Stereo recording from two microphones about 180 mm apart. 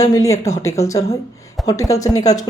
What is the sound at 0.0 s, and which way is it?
Speech, 20° left (ahead or behind).